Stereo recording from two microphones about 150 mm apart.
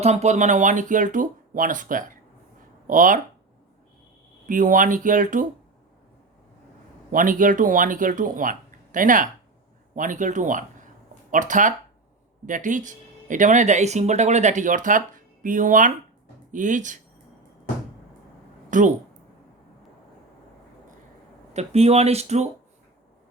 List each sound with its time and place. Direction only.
0.0 s speech: 50° right (ahead or behind)
4.4 s speech: 60° right (ahead or behind)
7.1 s speech: 65° right (ahead or behind)
18.7 s speech: 55° right (ahead or behind)
21.5 s speech: 45° right (ahead or behind)